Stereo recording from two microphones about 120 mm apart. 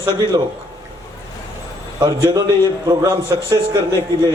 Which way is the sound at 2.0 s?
40° right (ahead or behind).